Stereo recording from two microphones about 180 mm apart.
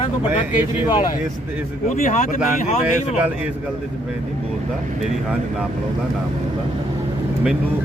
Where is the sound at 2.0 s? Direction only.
45° left (ahead or behind).